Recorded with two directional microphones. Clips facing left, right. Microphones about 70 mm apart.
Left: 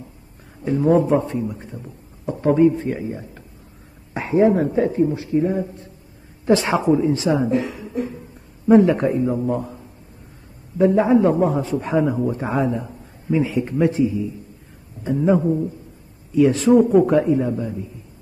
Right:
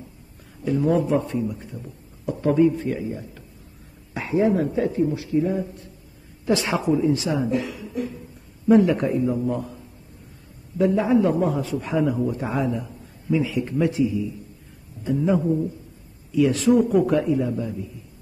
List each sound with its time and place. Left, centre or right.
0.7 s a man's voice: left
10.8 s a man's voice: left